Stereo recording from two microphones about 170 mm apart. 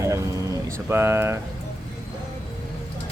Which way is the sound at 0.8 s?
15° right (ahead or behind).